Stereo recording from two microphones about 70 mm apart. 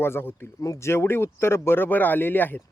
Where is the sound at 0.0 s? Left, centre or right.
Left.